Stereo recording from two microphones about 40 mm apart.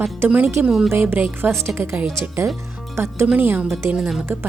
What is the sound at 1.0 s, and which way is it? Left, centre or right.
Speech, right.